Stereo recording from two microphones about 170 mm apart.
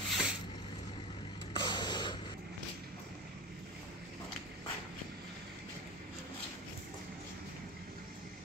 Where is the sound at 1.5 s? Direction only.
25° left (ahead or behind).